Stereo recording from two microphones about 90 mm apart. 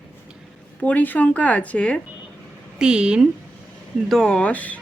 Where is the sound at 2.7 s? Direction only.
10° right (ahead or behind).